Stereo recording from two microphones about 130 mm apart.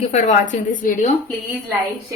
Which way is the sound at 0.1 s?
80° left.